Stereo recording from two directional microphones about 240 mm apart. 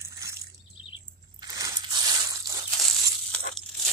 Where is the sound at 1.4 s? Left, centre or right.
Centre.